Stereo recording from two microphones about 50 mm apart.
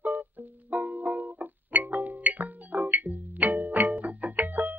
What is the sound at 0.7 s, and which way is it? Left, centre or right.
Music, right.